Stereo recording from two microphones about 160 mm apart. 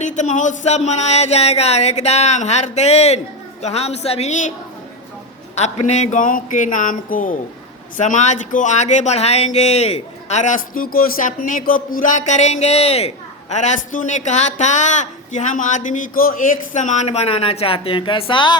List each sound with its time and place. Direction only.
0.0 s speech: 50° left (ahead or behind)
5.5 s speech: 45° left (ahead or behind)